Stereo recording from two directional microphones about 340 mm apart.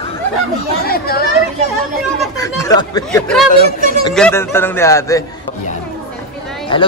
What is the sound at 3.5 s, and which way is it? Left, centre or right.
Speech, left.